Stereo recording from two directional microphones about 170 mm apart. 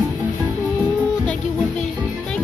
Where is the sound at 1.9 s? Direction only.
10° right (ahead or behind).